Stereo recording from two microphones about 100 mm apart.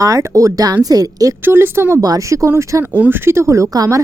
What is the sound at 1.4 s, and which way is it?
Speech, 20° right (ahead or behind).